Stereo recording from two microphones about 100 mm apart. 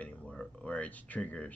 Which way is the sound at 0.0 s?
10° left (ahead or behind).